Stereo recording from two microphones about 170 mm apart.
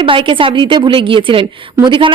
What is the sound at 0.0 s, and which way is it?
A woman's voice, 30° right (ahead or behind).